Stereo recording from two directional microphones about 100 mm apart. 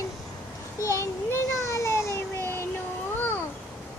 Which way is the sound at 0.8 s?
30° left (ahead or behind).